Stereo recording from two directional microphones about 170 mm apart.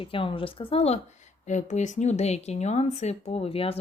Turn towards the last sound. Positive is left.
turn(degrees=35)  # may be behind; listen again after turning